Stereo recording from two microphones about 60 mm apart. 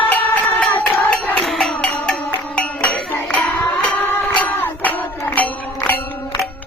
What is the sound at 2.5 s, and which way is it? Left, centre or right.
Music, left.